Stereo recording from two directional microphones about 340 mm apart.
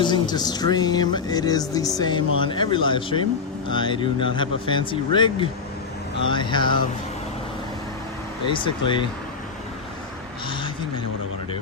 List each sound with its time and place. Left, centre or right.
0.0 s speech: centre
8.4 s speech: centre